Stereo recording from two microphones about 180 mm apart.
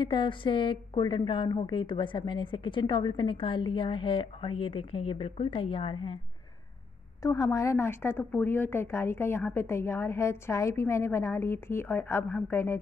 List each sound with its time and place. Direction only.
0.0 s a woman's voice: 25° left (ahead or behind)
7.2 s speech: 20° left (ahead or behind)